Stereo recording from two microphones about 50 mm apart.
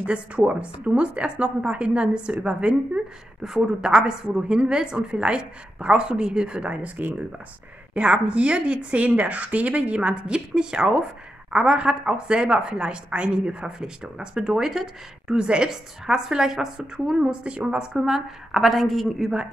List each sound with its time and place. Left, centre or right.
0.0 s a woman's voice: right; by 14.9 s centre
15.2 s a woman's voice: centre
17.9 s a woman's voice: centre